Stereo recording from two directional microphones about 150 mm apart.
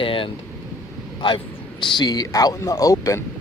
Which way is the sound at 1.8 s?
30° left (ahead or behind).